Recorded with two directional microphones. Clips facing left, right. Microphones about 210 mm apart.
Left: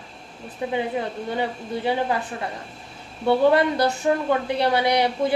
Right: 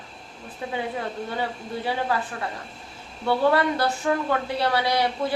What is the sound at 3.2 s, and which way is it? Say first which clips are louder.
A woman's voice: left 3 dB; 20° left (ahead or behind).